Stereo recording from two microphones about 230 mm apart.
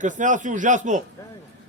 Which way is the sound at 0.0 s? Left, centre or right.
Right.